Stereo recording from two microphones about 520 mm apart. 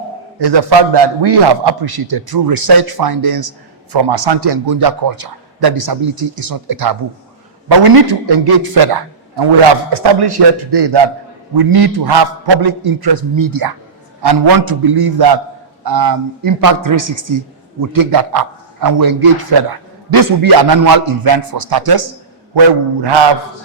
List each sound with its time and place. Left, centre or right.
0.3 s a man's voice: right